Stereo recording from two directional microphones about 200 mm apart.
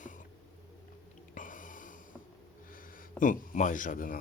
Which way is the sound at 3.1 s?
40° left (ahead or behind).